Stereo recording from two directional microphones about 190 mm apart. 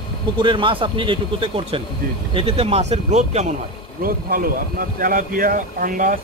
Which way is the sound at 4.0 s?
50° right (ahead or behind).